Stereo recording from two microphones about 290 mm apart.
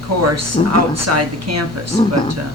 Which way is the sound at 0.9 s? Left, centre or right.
Right.